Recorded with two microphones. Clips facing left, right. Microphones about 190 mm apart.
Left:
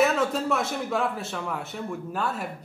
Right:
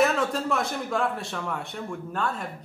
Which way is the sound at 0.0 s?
Centre (ahead or behind).